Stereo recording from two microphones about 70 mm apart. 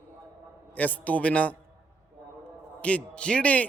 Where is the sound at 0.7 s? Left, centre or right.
Left.